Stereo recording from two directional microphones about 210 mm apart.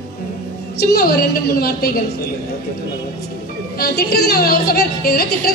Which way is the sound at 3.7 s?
45° left (ahead or behind).